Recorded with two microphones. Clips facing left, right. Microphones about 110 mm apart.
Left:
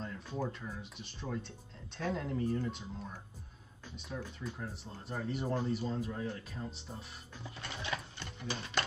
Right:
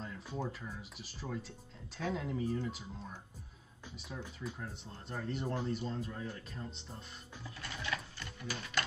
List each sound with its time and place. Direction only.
0.0 s speech: centre (ahead or behind)
4.4 s speech: centre (ahead or behind)
7.6 s sewing machine: 25° left (ahead or behind)